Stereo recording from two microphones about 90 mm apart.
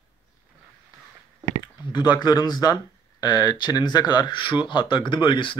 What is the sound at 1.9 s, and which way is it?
Speech, 50° left (ahead or behind).